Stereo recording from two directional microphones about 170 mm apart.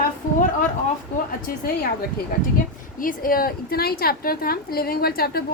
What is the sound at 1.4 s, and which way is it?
Speech, 60° left (ahead or behind).